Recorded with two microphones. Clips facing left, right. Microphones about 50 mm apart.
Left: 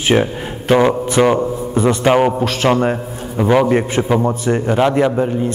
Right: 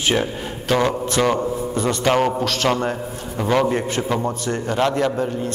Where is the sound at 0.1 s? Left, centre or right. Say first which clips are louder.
Left 10 dB; left.